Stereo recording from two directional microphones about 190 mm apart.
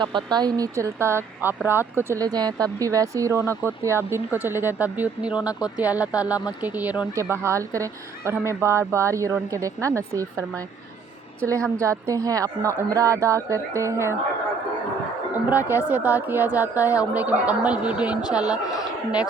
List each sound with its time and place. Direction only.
0.0 s speech: 25° right (ahead or behind)
11.4 s speech: 15° right (ahead or behind)
15.4 s speech: 10° right (ahead or behind)